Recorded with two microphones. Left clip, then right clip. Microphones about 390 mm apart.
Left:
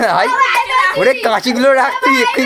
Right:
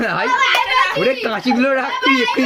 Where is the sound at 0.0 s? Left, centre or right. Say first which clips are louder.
Left 4 dB; centre.